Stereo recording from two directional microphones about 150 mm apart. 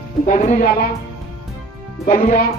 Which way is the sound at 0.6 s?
85° left.